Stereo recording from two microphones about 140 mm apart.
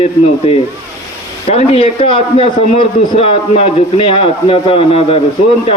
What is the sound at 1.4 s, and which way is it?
A man's voice, 45° left (ahead or behind).